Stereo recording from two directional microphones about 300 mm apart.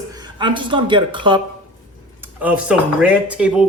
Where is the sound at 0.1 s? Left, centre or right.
Centre.